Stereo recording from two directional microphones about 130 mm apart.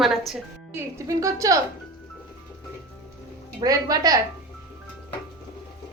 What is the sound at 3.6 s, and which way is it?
Speech, 30° right (ahead or behind).